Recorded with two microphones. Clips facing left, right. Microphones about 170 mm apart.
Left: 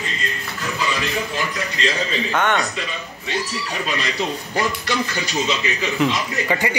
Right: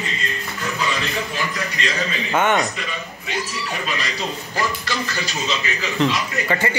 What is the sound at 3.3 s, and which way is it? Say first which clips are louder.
Speech: left 1 dB; centre (ahead or behind).